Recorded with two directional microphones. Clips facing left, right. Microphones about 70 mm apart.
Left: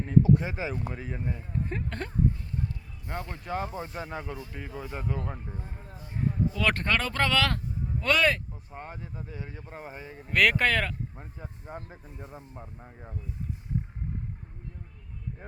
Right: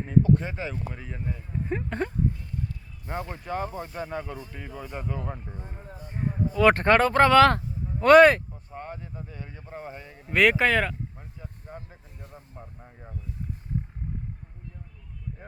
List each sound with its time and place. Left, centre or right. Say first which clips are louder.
0.2 s speech: even; centre
1.5 s speech: right 6 dB; centre
6.5 s speech: right 12 dB; right
8.7 s speech: right 3 dB; centre
10.2 s speech: right 3 dB; centre
12.1 s speech: left 2 dB; centre